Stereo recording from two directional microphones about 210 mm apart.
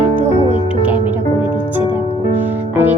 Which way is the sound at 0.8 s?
10° right (ahead or behind).